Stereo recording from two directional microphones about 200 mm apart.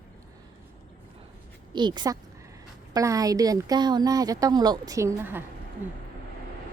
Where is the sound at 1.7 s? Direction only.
20° right (ahead or behind).